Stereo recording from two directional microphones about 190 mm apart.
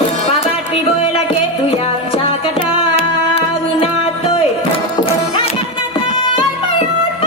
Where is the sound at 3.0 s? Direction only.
30° left (ahead or behind).